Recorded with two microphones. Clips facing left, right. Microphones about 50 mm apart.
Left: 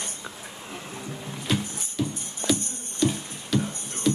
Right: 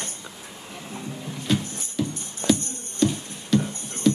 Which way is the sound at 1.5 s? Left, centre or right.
Centre.